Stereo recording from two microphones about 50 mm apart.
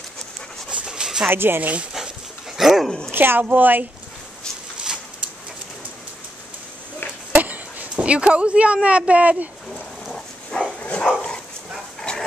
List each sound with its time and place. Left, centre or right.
0.7 s dog: centre
1.3 s speech: right
1.6 s speech: right
2.0 s dog: centre
3.1 s a woman's voice: right
7.3 s a sound: right
7.9 s speech: right
10.1 s dog: centre
12.0 s dog: centre